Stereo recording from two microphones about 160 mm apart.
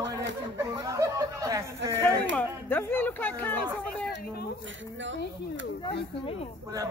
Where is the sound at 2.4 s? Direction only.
10° left (ahead or behind).